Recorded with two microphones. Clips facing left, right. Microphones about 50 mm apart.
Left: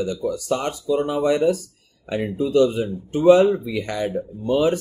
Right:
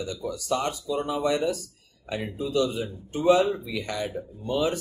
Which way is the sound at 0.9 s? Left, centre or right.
Left.